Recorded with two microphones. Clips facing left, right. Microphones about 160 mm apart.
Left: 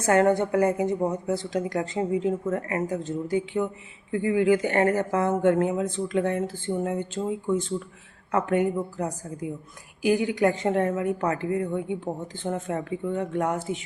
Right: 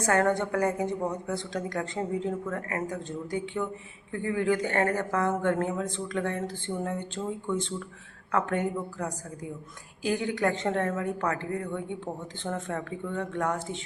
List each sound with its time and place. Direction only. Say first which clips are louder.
0.0 s a woman's voice: left 4 dB; 20° left (ahead or behind)
8.3 s a woman's voice: left 4 dB; 20° left (ahead or behind)